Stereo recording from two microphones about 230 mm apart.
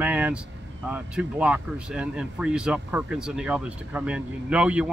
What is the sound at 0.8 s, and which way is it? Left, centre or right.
Speech, centre.